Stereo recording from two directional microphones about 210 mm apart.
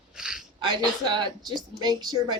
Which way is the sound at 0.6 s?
20° right (ahead or behind).